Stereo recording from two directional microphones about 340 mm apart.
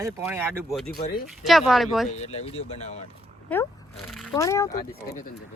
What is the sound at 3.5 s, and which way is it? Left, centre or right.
Speech, centre.